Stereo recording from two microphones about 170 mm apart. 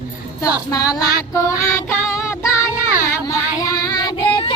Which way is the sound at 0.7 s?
20° left (ahead or behind).